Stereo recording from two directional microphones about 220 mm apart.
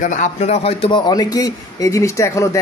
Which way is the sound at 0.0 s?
35° left (ahead or behind).